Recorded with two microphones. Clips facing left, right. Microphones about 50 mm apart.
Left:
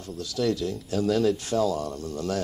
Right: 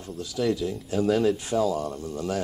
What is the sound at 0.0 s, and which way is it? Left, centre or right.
Speech, centre.